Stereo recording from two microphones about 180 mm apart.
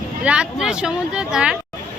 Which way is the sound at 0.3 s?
5° right (ahead or behind).